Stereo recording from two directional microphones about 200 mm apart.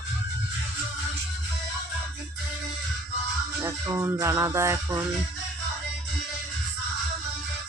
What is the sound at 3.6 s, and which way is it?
Music, 15° right (ahead or behind).